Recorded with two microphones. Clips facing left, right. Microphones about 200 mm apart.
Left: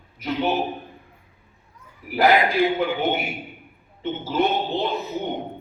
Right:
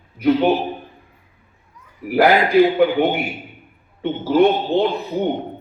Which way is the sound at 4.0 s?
65° right (ahead or behind).